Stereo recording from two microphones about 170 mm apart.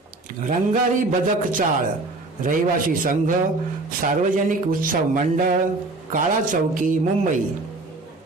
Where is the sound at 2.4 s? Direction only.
50° right (ahead or behind).